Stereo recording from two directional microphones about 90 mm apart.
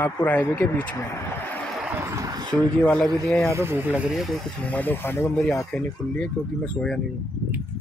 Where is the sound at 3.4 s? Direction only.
30° right (ahead or behind).